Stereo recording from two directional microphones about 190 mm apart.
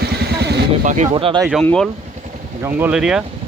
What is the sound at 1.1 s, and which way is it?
Speech, 25° right (ahead or behind).